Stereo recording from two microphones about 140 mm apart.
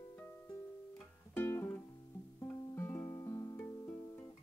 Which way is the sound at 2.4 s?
20° left (ahead or behind).